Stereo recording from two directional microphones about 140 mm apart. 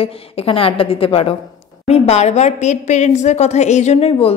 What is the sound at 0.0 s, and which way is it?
A woman's voice, 40° left (ahead or behind).